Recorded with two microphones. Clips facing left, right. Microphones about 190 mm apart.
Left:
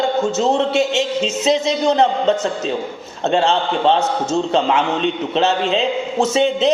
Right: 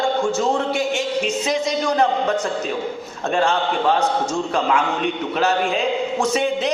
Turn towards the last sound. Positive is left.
turn(degrees=25)  # may be behind; listen again after turning